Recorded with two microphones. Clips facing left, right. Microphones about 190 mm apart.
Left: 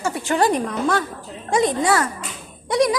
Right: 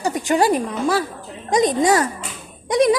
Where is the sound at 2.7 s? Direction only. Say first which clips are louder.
Right 3 dB; 20° right (ahead or behind).